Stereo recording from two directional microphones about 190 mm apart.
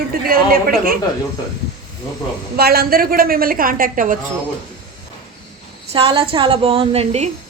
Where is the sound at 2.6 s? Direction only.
55° right (ahead or behind).